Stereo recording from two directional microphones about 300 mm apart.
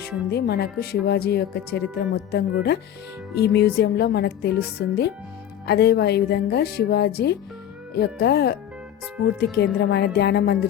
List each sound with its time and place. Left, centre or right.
0.3 s speech: left
9.8 s speech: left